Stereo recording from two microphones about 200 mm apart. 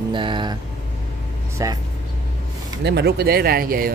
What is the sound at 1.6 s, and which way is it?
Speech, 15° right (ahead or behind).